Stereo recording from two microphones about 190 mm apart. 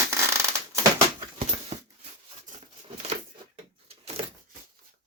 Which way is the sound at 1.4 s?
35° right (ahead or behind).